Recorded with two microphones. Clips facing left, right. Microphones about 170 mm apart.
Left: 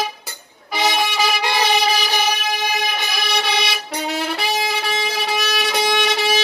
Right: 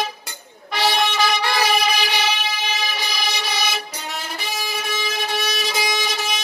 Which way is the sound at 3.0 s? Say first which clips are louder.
Left 3 dB; 60° left (ahead or behind).